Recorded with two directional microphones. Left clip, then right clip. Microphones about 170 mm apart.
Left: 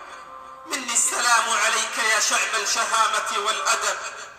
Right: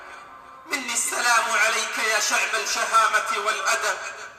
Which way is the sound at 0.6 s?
30° left (ahead or behind).